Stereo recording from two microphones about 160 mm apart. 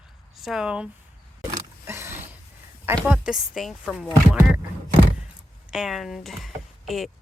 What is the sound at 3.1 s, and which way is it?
Speech, 5° right (ahead or behind).